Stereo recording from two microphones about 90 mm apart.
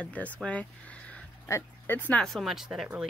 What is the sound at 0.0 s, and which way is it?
Speech, 15° left (ahead or behind).